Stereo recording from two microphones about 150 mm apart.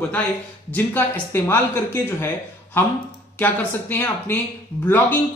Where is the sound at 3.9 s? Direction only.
15° left (ahead or behind).